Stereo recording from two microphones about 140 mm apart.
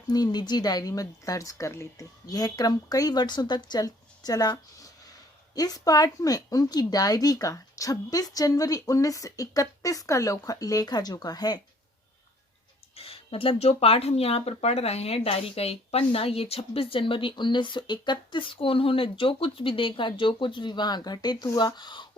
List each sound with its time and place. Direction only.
0.1 s speech: 30° left (ahead or behind)
13.0 s speech: 40° left (ahead or behind)